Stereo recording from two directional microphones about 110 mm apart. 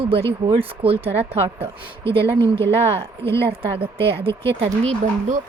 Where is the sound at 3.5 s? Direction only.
60° right (ahead or behind).